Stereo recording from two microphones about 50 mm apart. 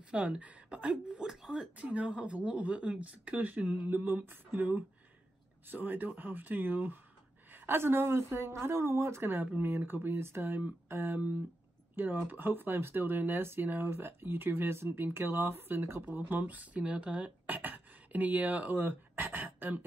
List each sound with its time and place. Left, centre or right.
0.1 s speech: centre
1.8 s speech: right
3.9 s speech: right
9.6 s speech: right
13.4 s speech: right
16.2 s speech: right